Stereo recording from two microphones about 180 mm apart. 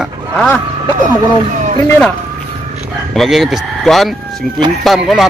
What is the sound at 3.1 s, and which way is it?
Speech, centre (ahead or behind).